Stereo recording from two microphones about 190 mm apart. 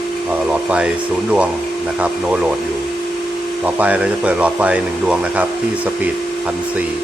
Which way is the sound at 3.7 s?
10° right (ahead or behind).